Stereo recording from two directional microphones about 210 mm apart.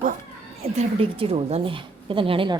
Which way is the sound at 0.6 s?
25° right (ahead or behind).